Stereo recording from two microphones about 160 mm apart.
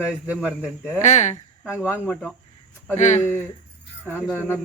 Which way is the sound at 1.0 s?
45° left (ahead or behind).